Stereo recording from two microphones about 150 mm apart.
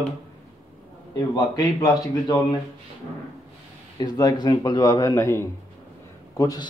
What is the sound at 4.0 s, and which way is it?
A man's voice, 25° left (ahead or behind).